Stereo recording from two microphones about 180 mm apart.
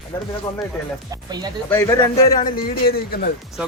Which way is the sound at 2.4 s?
55° left (ahead or behind).